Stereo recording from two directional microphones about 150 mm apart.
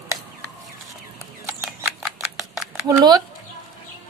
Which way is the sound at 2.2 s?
Centre (ahead or behind).